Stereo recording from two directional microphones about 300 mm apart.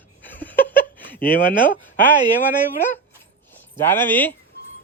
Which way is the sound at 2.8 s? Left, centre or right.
Centre.